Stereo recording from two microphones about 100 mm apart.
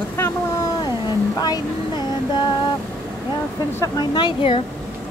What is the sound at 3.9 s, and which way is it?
Speech, 50° left (ahead or behind).